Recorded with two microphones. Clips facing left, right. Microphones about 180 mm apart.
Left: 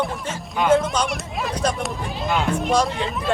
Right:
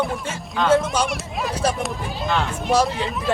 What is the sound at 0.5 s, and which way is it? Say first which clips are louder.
Speech: even; 10° left (ahead or behind).